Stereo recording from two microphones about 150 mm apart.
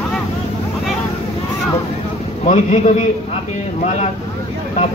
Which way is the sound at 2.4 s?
50° left (ahead or behind).